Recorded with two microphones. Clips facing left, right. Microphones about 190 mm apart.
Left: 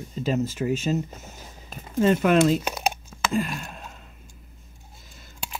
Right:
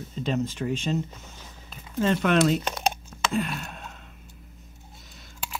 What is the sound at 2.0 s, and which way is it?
Speech, 10° left (ahead or behind).